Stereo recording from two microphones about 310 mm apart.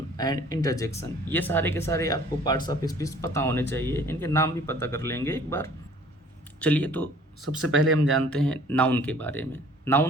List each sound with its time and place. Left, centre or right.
0.2 s speech: centre
7.6 s speech: right
8.3 s speech: centre